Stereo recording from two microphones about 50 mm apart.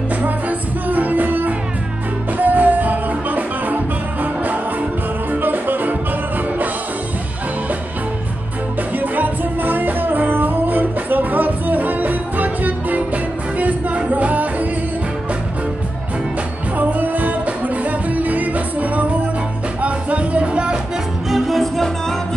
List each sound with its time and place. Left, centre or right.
0.2 s music: right
8.9 s music: right
16.7 s music: right
21.3 s music: centre